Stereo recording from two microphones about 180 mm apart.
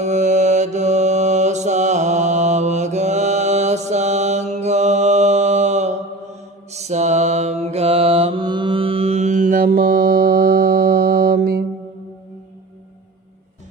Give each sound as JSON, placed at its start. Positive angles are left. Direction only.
{"t": 0.0, "sound": "mantra", "side_deg": -40}